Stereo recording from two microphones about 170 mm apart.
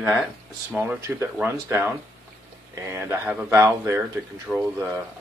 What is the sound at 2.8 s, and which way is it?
Speech, 15° right (ahead or behind).